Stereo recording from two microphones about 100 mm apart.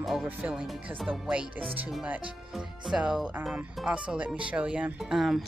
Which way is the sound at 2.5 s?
5° right (ahead or behind).